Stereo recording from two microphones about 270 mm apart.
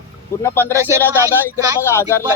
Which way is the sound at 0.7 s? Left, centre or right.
Centre.